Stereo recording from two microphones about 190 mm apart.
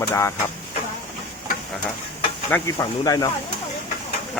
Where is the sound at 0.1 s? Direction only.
15° left (ahead or behind).